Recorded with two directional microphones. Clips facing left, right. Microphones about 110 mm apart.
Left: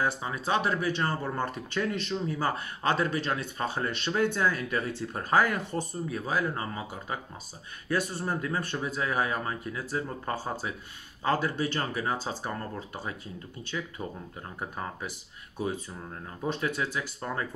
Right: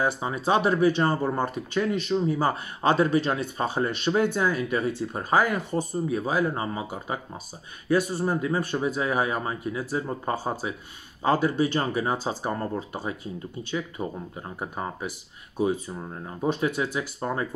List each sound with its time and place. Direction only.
0.0 s speech: 20° right (ahead or behind)